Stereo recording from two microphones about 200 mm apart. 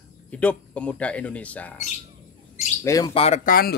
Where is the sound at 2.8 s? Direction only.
15° left (ahead or behind).